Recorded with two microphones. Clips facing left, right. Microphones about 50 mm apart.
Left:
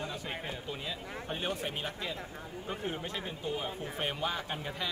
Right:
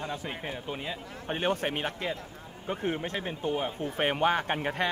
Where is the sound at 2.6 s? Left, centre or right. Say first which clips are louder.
Right 7 dB; right.